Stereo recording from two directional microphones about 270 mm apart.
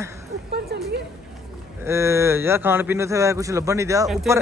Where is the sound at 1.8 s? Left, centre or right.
Centre.